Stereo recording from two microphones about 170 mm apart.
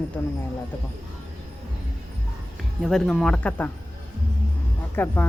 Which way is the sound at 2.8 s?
Centre (ahead or behind).